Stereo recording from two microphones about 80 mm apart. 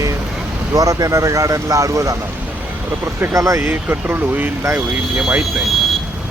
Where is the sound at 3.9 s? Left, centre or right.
Right.